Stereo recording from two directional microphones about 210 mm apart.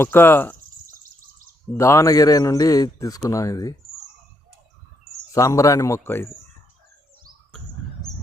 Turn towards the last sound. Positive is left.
turn(degrees=10)  # may be behind; listen again after turning